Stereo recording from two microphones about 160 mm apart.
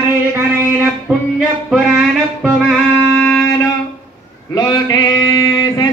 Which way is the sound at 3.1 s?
10° left (ahead or behind).